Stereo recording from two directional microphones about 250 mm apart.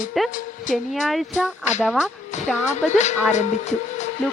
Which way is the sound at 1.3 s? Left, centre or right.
Left.